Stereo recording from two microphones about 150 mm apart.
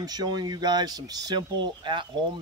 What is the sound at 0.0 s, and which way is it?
Speech, 25° right (ahead or behind).